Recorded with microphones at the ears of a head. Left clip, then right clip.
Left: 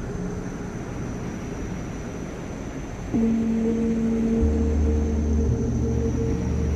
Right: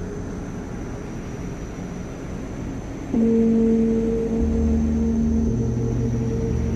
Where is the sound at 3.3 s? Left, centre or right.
Right.